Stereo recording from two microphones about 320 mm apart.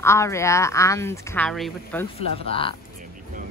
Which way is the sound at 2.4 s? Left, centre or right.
Centre.